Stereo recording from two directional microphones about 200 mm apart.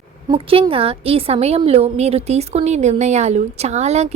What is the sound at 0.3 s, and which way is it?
A woman's voice, 25° right (ahead or behind).